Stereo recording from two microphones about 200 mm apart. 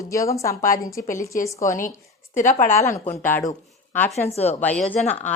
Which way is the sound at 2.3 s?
40° left (ahead or behind).